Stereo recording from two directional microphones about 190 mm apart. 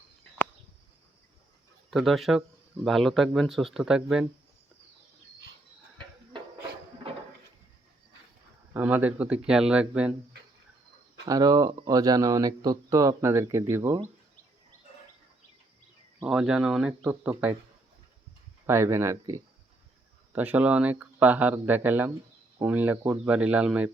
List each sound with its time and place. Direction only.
1.9 s speech: centre (ahead or behind)
7.1 s a sound: 30° right (ahead or behind)
8.7 s speech: 10° right (ahead or behind)
11.3 s speech: 20° right (ahead or behind)
16.2 s speech: 5° right (ahead or behind)
18.6 s speech: 15° right (ahead or behind)